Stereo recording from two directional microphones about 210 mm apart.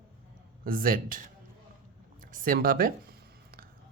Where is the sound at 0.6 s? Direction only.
45° right (ahead or behind).